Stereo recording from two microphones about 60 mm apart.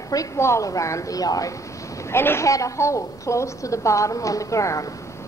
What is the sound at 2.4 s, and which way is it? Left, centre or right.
A woman's voice, left.